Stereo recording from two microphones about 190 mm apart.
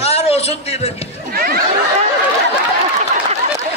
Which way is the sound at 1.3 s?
50° right (ahead or behind).